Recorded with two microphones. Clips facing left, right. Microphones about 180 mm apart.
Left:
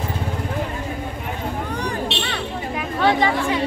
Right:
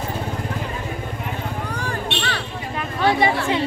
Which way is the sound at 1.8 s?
20° left (ahead or behind).